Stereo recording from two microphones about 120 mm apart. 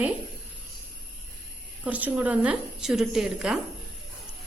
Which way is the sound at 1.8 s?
15° right (ahead or behind).